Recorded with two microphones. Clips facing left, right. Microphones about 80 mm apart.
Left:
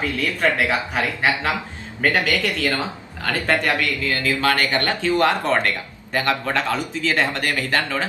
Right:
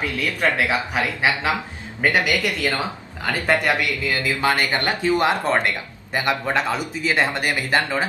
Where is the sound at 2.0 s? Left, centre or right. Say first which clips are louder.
Even; centre.